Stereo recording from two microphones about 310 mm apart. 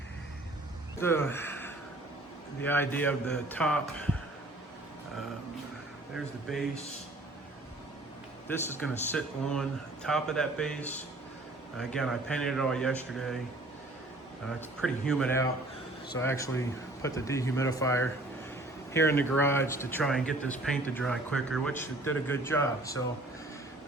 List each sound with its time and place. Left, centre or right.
0.9 s speech: centre
6.1 s speech: centre
8.4 s speech: centre
14.8 s speech: centre